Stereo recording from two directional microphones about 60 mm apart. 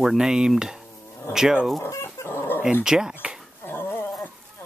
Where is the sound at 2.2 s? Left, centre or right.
Left.